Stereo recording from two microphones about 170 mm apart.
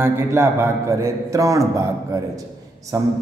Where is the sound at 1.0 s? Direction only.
20° right (ahead or behind).